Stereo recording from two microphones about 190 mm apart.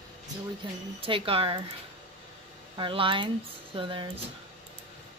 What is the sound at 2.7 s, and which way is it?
Speech, 25° right (ahead or behind).